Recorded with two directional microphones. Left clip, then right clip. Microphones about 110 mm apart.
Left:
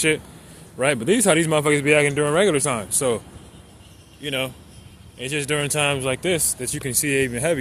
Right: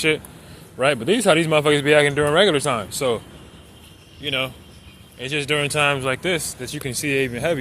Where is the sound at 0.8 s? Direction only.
40° left (ahead or behind).